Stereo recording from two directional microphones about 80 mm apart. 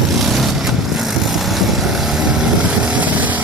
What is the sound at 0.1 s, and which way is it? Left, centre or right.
Vehicle, centre.